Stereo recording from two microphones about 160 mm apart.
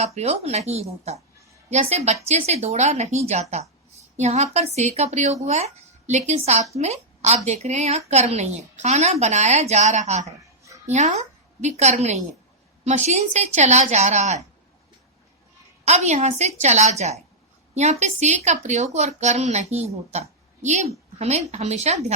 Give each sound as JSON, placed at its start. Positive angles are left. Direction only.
{"t": 0.0, "sound": "a woman's voice", "side_deg": -40}
{"t": 15.8, "sound": "a woman's voice", "side_deg": -45}